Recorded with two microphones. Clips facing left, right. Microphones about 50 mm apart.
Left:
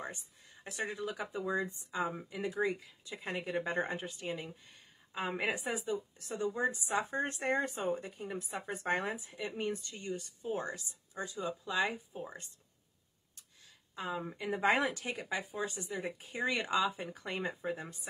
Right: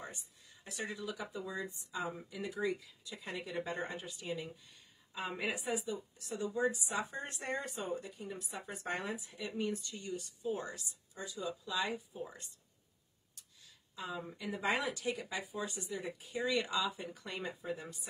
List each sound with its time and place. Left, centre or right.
0.7 s speech: left
13.9 s speech: left